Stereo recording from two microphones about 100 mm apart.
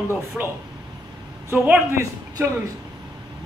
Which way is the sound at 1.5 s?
25° right (ahead or behind).